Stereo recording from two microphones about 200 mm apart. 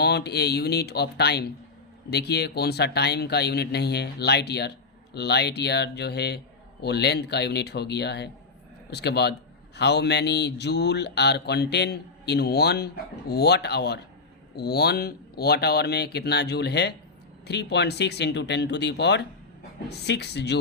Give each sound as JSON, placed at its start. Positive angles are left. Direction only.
{"t": 0.0, "sound": "speech", "side_deg": 55}